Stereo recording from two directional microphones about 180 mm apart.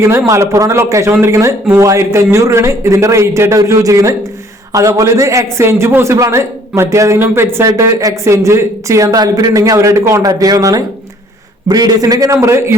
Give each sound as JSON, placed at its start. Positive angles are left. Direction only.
{"t": 0.0, "sound": "a man's voice", "side_deg": -15}